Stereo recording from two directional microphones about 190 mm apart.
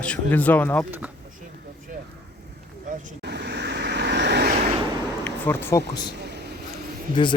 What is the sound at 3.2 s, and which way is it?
Vehicle, 60° right (ahead or behind).